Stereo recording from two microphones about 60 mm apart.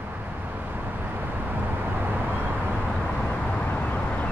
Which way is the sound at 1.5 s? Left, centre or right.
Right.